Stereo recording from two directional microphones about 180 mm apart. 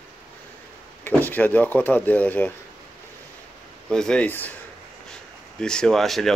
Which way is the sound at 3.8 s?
5° left (ahead or behind).